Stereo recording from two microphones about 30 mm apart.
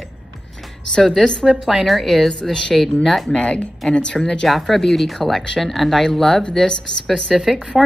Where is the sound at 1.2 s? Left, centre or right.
Left.